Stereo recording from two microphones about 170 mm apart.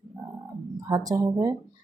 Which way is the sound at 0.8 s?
20° right (ahead or behind).